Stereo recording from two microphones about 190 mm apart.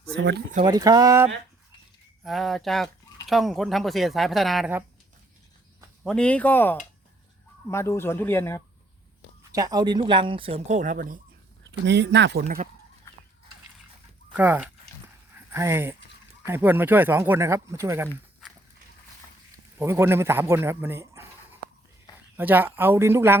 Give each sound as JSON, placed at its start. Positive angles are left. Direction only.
{"t": 0.6, "sound": "speech", "side_deg": -20}
{"t": 2.2, "sound": "speech", "side_deg": 0}
{"t": 6.0, "sound": "speech", "side_deg": 5}
{"t": 9.5, "sound": "speech", "side_deg": -20}
{"t": 11.9, "sound": "speech", "side_deg": -65}
{"t": 14.3, "sound": "speech", "side_deg": -10}
{"t": 19.8, "sound": "speech", "side_deg": -15}
{"t": 22.4, "sound": "speech", "side_deg": -10}